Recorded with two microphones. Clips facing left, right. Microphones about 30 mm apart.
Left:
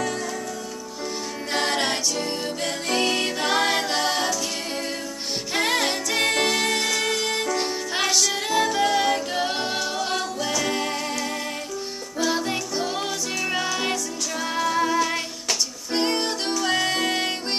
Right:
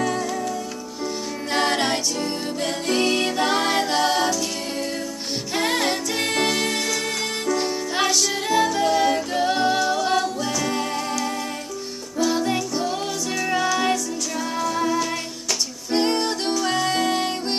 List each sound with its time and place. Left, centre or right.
1.5 s music: centre
5.5 s music: centre
12.2 s music: centre
15.9 s music: centre